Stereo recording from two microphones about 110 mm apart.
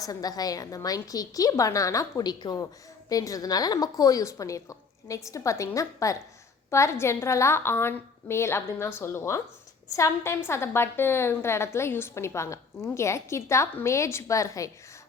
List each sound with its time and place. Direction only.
0.0 s a woman's voice: 35° left (ahead or behind)